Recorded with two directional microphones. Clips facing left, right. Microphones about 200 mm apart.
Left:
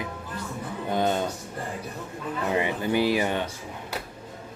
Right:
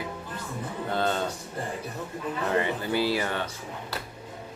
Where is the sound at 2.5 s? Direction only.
15° left (ahead or behind).